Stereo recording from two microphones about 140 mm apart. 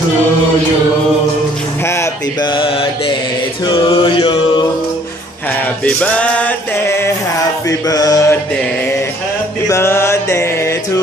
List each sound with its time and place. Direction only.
2.5 s mantra: 35° left (ahead or behind)
5.9 s music: 10° left (ahead or behind)
7.9 s a sound: 25° left (ahead or behind)
9.7 s music: 15° left (ahead or behind)